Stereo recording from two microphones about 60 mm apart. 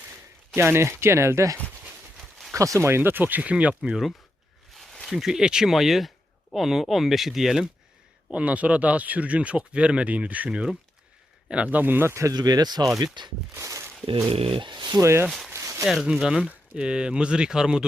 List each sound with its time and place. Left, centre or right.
0.5 s speech: right
2.5 s speech: right
3.5 s speech: right
3.8 s speech: centre
4.7 s a sound: centre
5.0 s speech: centre
8.3 s speech: right
12.3 s speech: right
13.6 s speech: right
15.0 s speech: right
15.5 s a sound: right
16.0 s speech: centre